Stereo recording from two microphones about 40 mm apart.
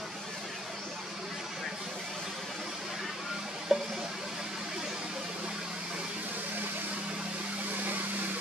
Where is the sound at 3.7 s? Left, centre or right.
Centre.